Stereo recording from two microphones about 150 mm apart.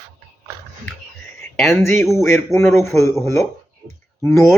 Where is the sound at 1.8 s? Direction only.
15° left (ahead or behind).